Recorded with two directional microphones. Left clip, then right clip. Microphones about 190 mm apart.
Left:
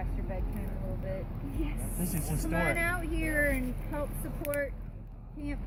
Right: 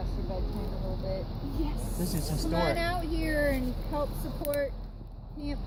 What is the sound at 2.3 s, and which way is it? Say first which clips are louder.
Speech: right 1 dB; 10° left (ahead or behind).